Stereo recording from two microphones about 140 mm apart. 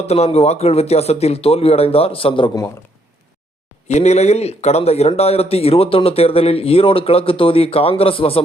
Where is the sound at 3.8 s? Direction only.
50° left (ahead or behind).